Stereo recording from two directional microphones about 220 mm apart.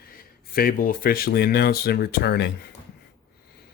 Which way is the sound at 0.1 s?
40° left (ahead or behind).